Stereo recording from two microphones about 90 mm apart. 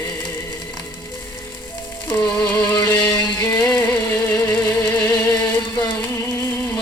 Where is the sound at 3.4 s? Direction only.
35° left (ahead or behind).